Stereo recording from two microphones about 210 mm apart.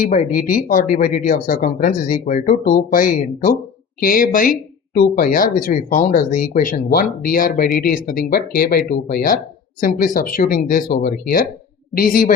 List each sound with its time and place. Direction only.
0.0 s a woman's voice: 40° left (ahead or behind)